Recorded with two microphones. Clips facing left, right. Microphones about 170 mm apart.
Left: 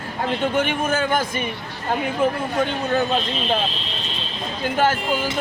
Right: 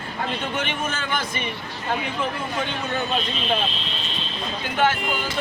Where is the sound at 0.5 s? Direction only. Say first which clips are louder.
Left 7 dB; 50° left (ahead or behind).